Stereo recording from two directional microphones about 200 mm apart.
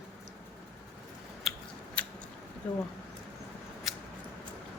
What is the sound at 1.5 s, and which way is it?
Scissors, centre (ahead or behind).